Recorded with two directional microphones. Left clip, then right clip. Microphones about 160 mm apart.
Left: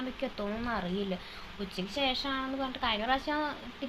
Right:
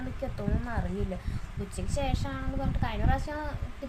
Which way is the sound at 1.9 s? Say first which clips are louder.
Left 3 dB; centre (ahead or behind).